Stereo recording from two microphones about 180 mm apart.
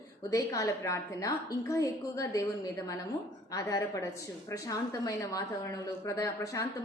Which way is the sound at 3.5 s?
15° left (ahead or behind).